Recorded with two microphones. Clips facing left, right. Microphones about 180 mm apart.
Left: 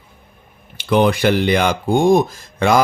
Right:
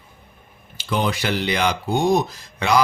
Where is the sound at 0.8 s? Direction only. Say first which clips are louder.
Left 8 dB; 60° left (ahead or behind).